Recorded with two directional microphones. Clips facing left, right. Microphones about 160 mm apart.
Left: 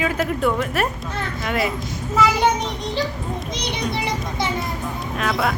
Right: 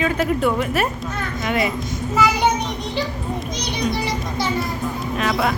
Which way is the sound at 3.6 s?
20° left (ahead or behind).